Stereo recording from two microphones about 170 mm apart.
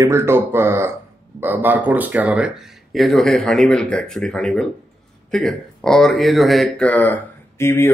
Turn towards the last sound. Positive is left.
turn(degrees=15)  # may be behind; listen again after turning